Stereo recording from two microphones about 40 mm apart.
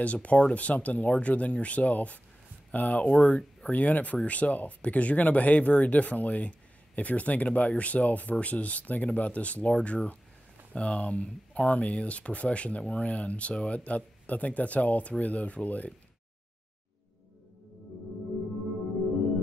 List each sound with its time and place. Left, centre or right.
0.0 s speech: left
3.7 s speech: left